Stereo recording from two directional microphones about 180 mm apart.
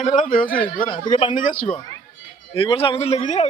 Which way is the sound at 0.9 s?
30° left (ahead or behind).